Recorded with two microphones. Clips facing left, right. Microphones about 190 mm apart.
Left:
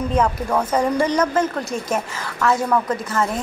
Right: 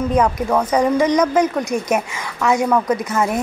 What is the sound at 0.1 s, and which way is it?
Speech, 10° right (ahead or behind).